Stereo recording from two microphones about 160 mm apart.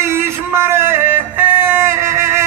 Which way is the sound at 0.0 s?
15° right (ahead or behind).